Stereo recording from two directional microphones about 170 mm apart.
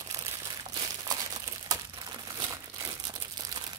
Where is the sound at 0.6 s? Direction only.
20° right (ahead or behind).